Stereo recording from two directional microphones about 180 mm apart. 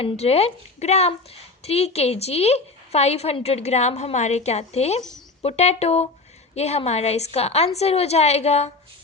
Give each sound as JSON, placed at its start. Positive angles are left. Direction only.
{"t": 0.0, "sound": "a woman's voice", "side_deg": 35}